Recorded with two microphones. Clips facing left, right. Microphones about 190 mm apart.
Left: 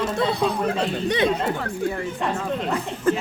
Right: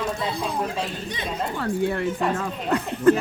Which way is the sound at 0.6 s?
70° left (ahead or behind).